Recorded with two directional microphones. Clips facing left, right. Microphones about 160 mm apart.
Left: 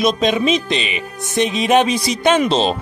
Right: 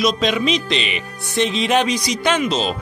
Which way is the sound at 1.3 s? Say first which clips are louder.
Left 3 dB; 15° left (ahead or behind).